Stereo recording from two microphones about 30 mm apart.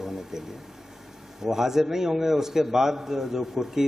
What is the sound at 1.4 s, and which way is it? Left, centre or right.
A man's voice, centre.